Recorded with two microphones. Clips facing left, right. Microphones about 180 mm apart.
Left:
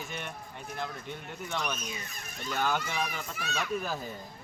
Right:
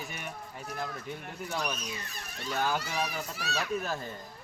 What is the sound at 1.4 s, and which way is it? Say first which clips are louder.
Speech: even; 35° right (ahead or behind).